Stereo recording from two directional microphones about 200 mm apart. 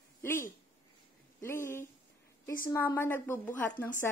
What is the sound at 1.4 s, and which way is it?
A woman's voice, 15° left (ahead or behind).